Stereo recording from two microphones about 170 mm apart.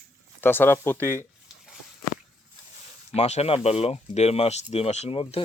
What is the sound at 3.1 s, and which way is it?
Speech, 40° left (ahead or behind).